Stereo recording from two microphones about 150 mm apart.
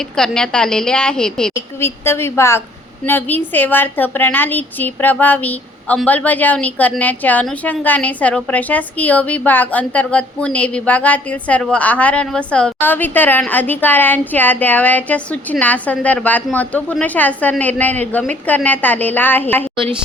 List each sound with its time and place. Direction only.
0.0 s a woman's voice: 5° left (ahead or behind)
1.5 s a woman's voice: 15° left (ahead or behind)